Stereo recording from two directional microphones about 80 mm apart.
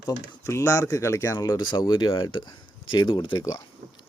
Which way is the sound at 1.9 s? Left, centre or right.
Left.